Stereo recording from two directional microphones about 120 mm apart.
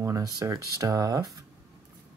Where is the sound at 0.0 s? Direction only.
30° right (ahead or behind).